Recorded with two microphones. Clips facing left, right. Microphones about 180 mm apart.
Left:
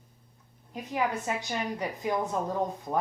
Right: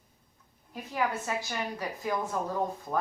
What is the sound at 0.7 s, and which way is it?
A woman's voice, 20° left (ahead or behind).